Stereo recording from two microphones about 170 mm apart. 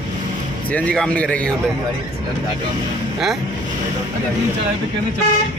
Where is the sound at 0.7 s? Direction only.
5° left (ahead or behind).